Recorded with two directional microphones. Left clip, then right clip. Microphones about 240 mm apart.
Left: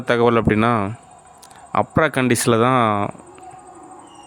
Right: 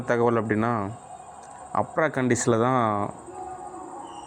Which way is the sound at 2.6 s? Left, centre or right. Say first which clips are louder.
Left 6 dB; left.